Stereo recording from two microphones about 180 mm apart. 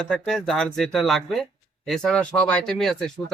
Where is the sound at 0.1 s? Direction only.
5° left (ahead or behind).